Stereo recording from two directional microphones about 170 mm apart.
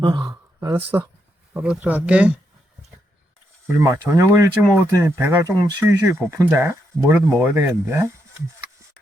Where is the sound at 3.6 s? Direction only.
15° right (ahead or behind).